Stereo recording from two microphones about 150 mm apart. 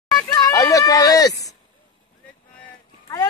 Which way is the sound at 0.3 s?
25° left (ahead or behind).